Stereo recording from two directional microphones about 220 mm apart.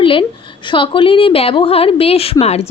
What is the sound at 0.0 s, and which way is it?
Speech, 25° left (ahead or behind).